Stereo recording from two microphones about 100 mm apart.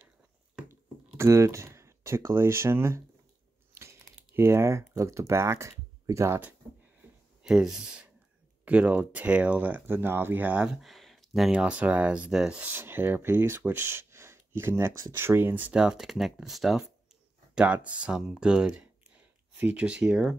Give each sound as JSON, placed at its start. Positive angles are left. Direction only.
{"t": 0.7, "sound": "a sound", "side_deg": -30}
{"t": 3.7, "sound": "speech", "side_deg": -25}
{"t": 7.4, "sound": "speech", "side_deg": -5}
{"t": 10.8, "sound": "speech", "side_deg": 0}
{"t": 15.7, "sound": "speech", "side_deg": -5}
{"t": 17.7, "sound": "speech", "side_deg": -15}